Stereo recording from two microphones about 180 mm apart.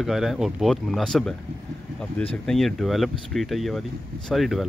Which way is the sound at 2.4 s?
Centre (ahead or behind).